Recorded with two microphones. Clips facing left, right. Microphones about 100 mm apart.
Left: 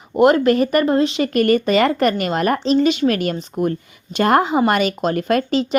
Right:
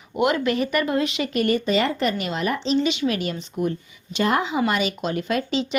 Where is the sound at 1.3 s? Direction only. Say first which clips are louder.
Left 4 dB; 55° left (ahead or behind).